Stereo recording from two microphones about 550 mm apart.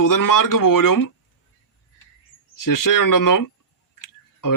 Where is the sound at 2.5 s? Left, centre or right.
Left.